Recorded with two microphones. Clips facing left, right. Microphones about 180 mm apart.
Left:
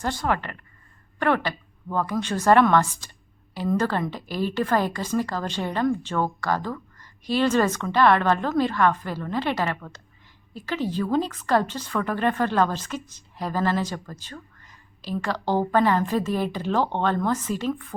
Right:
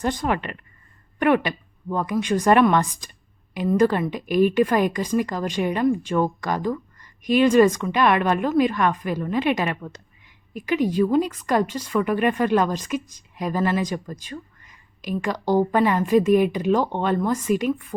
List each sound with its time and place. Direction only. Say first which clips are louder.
0.0 s a woman's voice: right 2 dB; 15° right (ahead or behind)